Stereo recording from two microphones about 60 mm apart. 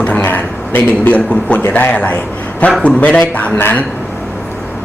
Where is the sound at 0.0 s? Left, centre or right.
Left.